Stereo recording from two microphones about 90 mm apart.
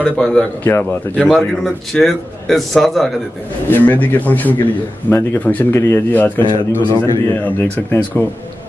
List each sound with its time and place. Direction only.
0.0 s a man's voice: 10° left (ahead or behind)
3.6 s speech: 20° left (ahead or behind)